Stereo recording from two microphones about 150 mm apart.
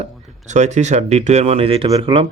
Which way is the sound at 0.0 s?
50° right (ahead or behind).